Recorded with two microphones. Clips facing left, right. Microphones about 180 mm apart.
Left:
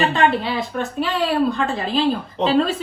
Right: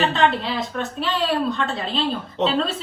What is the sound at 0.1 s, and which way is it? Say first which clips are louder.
A woman's voice: left 2 dB; centre (ahead or behind).